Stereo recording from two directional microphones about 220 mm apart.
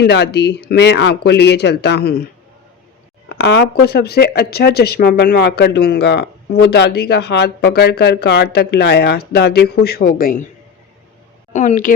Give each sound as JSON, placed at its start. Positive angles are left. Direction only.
{"t": 0.0, "sound": "speech", "side_deg": 50}
{"t": 3.2, "sound": "speech", "side_deg": 50}
{"t": 11.5, "sound": "speech", "side_deg": 35}